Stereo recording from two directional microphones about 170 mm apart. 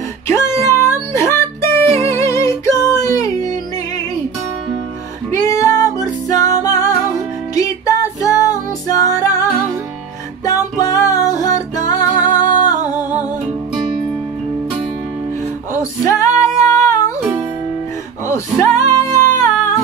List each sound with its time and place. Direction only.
0.3 s music: 15° left (ahead or behind)
5.3 s music: 20° left (ahead or behind)
16.1 s female singing: 20° left (ahead or behind)
18.2 s music: 15° left (ahead or behind)